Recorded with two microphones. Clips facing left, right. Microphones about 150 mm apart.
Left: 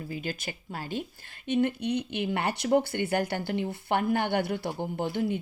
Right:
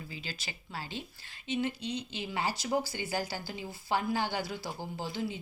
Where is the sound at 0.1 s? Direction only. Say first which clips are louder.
Left 9 dB; 50° left (ahead or behind).